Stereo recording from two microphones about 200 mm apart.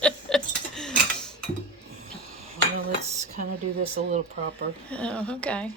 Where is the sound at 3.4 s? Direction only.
40° right (ahead or behind).